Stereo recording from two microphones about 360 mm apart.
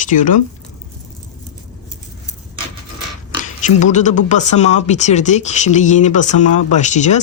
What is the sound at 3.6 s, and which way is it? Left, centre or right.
Speech, centre.